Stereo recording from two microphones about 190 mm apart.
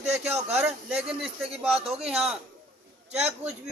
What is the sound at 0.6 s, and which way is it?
Speech, 5° right (ahead or behind).